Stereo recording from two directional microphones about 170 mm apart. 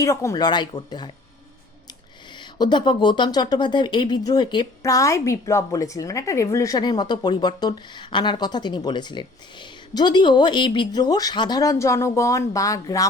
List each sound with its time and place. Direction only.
0.0 s speech: 20° left (ahead or behind)
2.4 s speech: 25° left (ahead or behind)